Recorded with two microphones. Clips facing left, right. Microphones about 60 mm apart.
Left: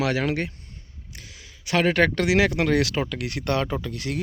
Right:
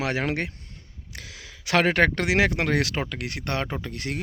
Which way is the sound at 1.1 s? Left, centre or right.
Right.